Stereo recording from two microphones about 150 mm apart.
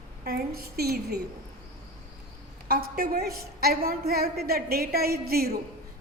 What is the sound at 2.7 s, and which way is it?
A woman's voice, 85° right.